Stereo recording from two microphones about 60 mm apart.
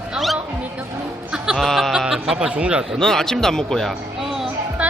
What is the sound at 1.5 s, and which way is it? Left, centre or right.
Speech, centre.